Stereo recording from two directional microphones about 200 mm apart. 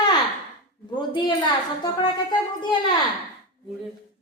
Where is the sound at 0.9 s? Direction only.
20° left (ahead or behind).